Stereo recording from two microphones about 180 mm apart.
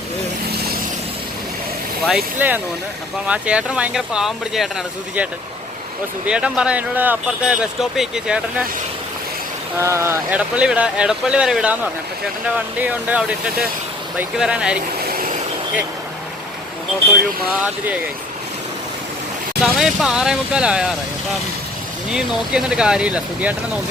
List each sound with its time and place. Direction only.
2.0 s speech: 5° right (ahead or behind)
6.2 s speech: 5° right (ahead or behind)
9.7 s speech: 15° right (ahead or behind)
15.0 s vehicle: 55° right (ahead or behind)
19.6 s speech: centre (ahead or behind)
22.1 s speech: 5° right (ahead or behind)